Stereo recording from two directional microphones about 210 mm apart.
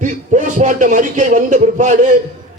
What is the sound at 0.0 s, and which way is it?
Speech, 35° right (ahead or behind).